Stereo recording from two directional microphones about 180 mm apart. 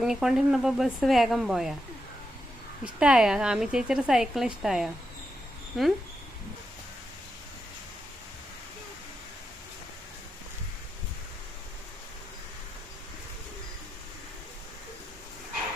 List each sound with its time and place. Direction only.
0.0 s a woman's voice: 5° right (ahead or behind)
3.0 s a woman's voice: 5° right (ahead or behind)